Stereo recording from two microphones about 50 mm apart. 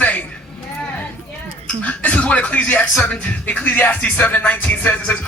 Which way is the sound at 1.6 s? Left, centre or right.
Left.